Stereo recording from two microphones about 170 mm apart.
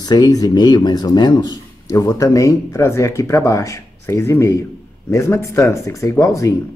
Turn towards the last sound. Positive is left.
turn(degrees=20)  # may be behind; listen again after turning